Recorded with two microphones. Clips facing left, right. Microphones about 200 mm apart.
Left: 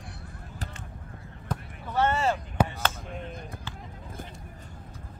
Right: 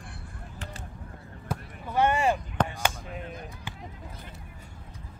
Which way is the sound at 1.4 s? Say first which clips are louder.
Even; 10° right (ahead or behind).